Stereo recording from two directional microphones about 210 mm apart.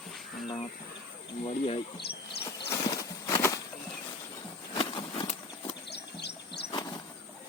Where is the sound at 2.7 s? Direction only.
15° left (ahead or behind).